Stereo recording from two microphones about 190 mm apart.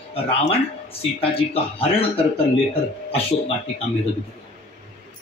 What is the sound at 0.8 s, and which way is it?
Speech, 30° left (ahead or behind).